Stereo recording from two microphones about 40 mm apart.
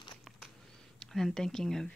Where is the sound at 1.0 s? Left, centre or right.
Centre.